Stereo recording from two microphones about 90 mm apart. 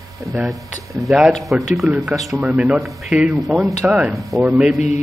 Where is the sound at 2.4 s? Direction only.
15° right (ahead or behind).